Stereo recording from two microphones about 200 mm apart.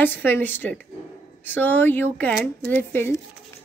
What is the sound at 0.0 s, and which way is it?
Speech, 10° left (ahead or behind).